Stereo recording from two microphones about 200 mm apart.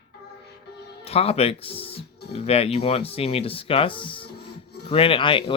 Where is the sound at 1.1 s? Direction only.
30° left (ahead or behind).